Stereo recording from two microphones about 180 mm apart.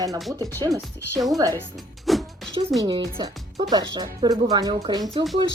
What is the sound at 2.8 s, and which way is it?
Speech, 20° right (ahead or behind).